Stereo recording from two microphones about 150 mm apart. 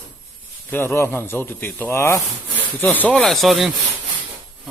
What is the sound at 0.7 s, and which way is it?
A man's voice, 15° left (ahead or behind).